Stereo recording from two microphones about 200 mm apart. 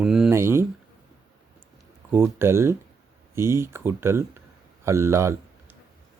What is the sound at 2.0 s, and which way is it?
Speech, 10° right (ahead or behind).